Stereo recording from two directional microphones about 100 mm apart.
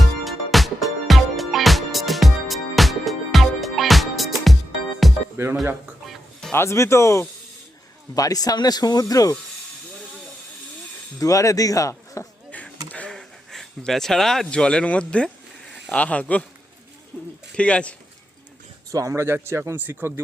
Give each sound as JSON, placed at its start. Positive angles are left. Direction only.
{"t": 0.3, "sound": "music", "side_deg": 0}
{"t": 5.4, "sound": "speech", "side_deg": -25}
{"t": 6.5, "sound": "speech", "side_deg": 25}
{"t": 11.2, "sound": "speech", "side_deg": 35}
{"t": 12.5, "sound": "a sound", "side_deg": 15}
{"t": 12.9, "sound": "speech", "side_deg": 10}
{"t": 18.9, "sound": "speech", "side_deg": -35}